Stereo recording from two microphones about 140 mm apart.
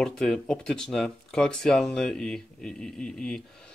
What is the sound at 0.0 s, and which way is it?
Speech, 5° left (ahead or behind).